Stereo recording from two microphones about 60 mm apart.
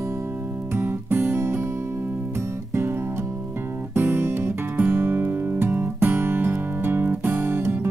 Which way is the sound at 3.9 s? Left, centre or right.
Right.